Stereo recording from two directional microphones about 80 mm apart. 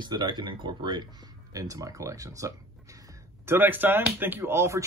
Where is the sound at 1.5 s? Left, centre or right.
Right.